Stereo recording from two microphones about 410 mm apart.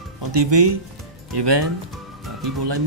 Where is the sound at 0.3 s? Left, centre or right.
Right.